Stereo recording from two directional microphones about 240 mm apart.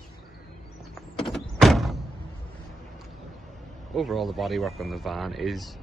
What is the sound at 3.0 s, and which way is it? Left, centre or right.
Speech, centre.